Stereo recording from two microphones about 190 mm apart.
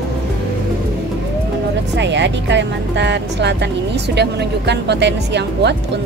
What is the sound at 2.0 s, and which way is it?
Speech, 70° right (ahead or behind).